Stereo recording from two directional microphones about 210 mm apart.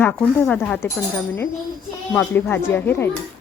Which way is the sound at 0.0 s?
10° left (ahead or behind).